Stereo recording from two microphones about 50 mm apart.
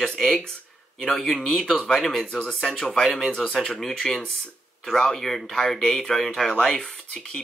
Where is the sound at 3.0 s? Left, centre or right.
Centre.